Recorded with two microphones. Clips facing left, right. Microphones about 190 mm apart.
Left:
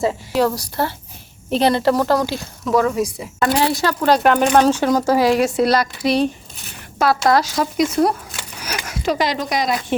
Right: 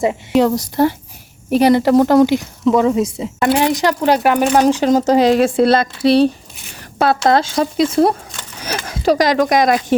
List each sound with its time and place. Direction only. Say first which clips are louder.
0.0 s speech: right 4 dB; 20° right (ahead or behind); by 9.8 s 50° right (ahead or behind)